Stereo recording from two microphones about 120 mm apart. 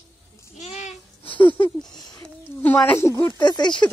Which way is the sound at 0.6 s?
70° left (ahead or behind).